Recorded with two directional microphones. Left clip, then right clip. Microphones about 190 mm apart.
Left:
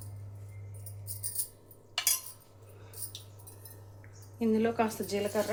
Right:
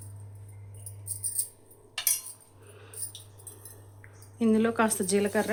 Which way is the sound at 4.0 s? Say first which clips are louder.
Right 4 dB; 45° right (ahead or behind).